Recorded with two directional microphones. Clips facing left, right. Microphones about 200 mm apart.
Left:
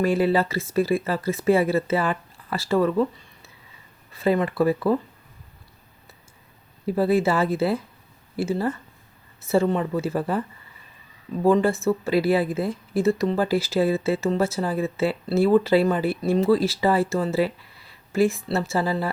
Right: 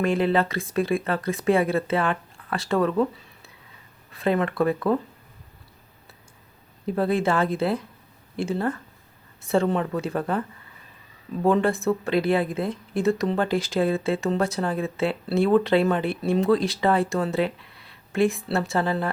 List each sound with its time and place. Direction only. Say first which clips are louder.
0.0 s speech: left 1 dB; 5° left (ahead or behind)
6.8 s speech: left 2 dB; 5° left (ahead or behind)
11.4 s speech: left 2 dB; centre (ahead or behind)